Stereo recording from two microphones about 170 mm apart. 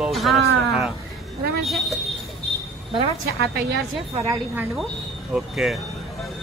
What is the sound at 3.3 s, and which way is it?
Speech, 80° right.